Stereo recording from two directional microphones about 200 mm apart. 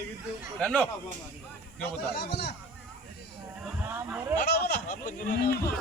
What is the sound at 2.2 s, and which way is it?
Music, 55° left (ahead or behind).